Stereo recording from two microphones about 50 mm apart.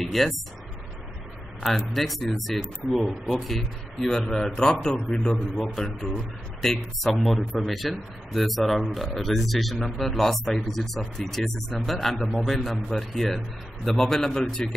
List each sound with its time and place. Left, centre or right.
0.0 s speech: centre
1.6 s a man's voice: centre
5.6 s a man's voice: centre